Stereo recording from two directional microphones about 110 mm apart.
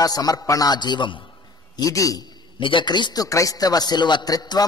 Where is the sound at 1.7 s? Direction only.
30° left (ahead or behind).